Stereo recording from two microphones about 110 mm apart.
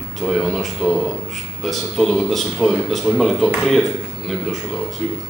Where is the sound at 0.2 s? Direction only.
Centre (ahead or behind).